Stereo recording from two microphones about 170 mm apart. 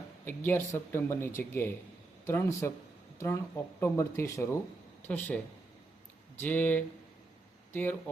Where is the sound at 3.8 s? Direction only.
15° left (ahead or behind).